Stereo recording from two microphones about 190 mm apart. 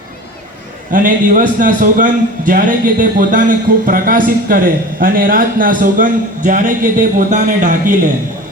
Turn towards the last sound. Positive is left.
turn(degrees=-40)  # may be behind; listen again after turning